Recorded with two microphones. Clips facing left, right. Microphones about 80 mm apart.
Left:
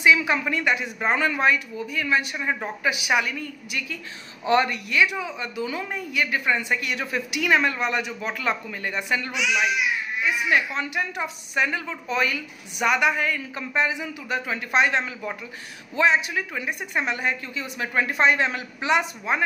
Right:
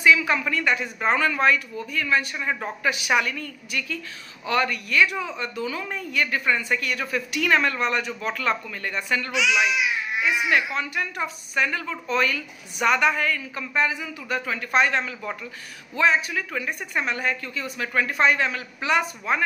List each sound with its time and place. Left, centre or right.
0.0 s a woman's voice: centre
5.0 s a woman's voice: centre
9.3 s speech: right
10.5 s a woman's voice: left